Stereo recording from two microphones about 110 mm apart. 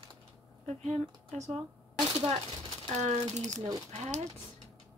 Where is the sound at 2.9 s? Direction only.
90° right.